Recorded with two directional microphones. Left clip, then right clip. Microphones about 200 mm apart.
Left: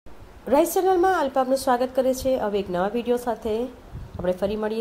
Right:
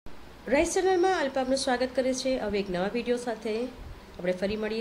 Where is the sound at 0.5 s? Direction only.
25° left (ahead or behind).